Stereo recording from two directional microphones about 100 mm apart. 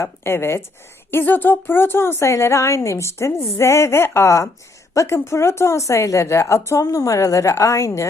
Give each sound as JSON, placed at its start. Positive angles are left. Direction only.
{"t": 0.0, "sound": "a woman's voice", "side_deg": 25}